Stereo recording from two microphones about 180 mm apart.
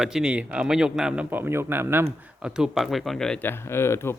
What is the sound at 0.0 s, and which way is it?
Speech, 5° right (ahead or behind).